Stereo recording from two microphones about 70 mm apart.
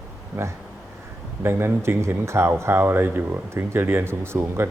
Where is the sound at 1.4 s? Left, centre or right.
Right.